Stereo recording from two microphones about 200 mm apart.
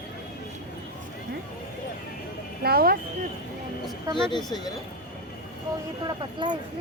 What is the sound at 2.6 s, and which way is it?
Speech, 50° right (ahead or behind).